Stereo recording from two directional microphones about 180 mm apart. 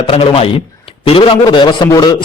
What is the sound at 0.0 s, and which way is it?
A man's voice, 30° left (ahead or behind).